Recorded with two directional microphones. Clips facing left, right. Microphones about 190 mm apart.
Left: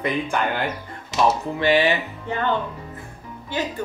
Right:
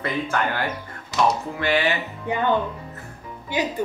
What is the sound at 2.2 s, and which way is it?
Speech, 15° right (ahead or behind).